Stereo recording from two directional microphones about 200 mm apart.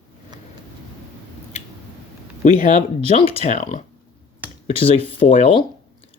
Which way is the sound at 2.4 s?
40° left (ahead or behind).